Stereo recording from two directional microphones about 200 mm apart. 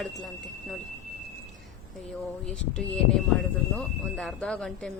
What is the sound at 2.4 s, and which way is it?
Speech, 5° left (ahead or behind).